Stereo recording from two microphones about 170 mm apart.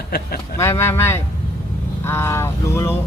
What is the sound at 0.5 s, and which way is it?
Speech, 15° left (ahead or behind).